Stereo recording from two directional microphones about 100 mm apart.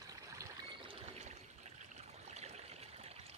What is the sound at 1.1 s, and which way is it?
Water, 90° right.